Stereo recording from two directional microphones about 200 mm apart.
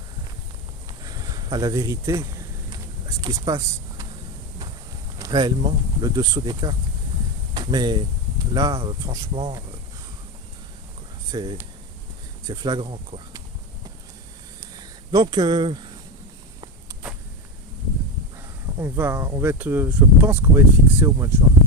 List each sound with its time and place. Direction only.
1.0 s speech: 20° right (ahead or behind)
5.2 s speech: 20° right (ahead or behind)
11.3 s speech: 20° right (ahead or behind)
15.1 s speech: 20° right (ahead or behind)
18.8 s speech: 10° right (ahead or behind)